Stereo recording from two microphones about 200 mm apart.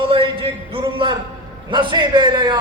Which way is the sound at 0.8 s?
25° right (ahead or behind).